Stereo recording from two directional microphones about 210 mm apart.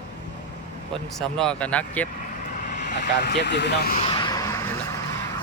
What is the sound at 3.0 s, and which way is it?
Speech, 55° left (ahead or behind).